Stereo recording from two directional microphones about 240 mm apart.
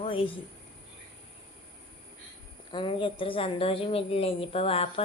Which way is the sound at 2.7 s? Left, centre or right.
Left.